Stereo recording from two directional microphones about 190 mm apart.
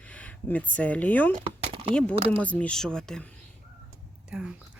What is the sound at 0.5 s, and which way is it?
Speech, 10° left (ahead or behind).